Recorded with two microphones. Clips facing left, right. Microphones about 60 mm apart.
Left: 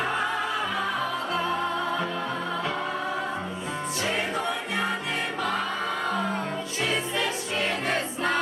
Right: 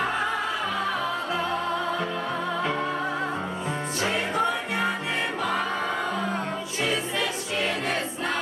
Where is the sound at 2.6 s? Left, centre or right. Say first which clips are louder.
Right 2 dB; centre.